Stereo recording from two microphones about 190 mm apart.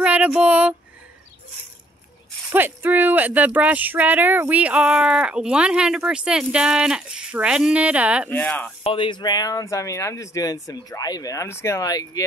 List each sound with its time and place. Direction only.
0.0 s a sound: 5° right (ahead or behind)
2.5 s speech: 10° right (ahead or behind)
8.3 s speech: 10° left (ahead or behind)
8.8 s speech: 25° left (ahead or behind)